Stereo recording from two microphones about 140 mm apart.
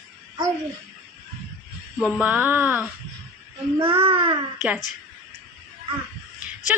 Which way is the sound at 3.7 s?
40° right (ahead or behind).